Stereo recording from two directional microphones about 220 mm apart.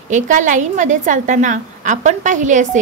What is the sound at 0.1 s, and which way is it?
A woman's voice, 35° right (ahead or behind).